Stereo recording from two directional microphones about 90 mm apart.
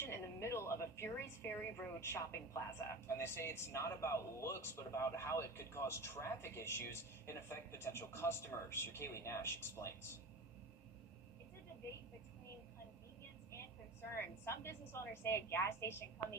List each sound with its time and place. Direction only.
0.0 s music: 30° left (ahead or behind)
2.0 s speech: 30° left (ahead or behind)
14.4 s speech: 30° left (ahead or behind)